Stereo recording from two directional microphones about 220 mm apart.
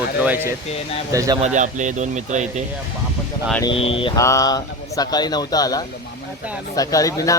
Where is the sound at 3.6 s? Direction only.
25° left (ahead or behind).